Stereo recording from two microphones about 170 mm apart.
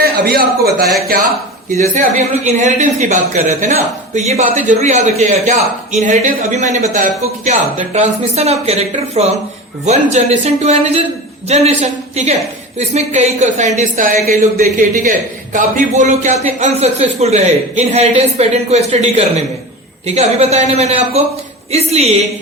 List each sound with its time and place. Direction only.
0.0 s a man's voice: 65° right (ahead or behind)
2.0 s speech: 45° right (ahead or behind)
15.5 s speech: 50° right (ahead or behind)